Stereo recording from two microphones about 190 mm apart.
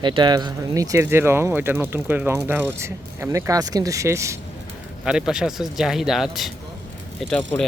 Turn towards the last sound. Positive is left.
turn(degrees=5)  # may be behind; listen again after turning